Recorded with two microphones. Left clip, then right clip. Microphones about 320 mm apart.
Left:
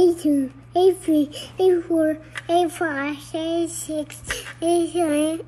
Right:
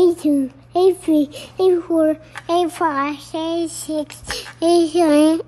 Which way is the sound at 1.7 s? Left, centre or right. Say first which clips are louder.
Right 4 dB; right.